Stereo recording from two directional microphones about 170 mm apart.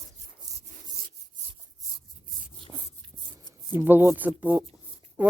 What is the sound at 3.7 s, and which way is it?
Speech, 10° right (ahead or behind).